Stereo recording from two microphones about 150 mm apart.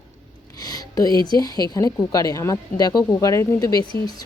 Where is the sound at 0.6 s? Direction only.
25° left (ahead or behind).